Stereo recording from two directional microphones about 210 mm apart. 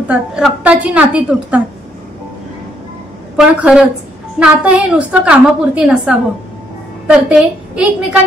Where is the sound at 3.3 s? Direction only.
5° right (ahead or behind).